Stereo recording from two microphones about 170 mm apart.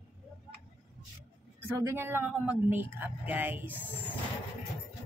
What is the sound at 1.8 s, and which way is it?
A woman's voice, 15° right (ahead or behind).